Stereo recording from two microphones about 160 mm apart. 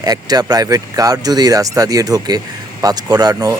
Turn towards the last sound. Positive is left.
turn(degrees=-20)  # may be behind; listen again after turning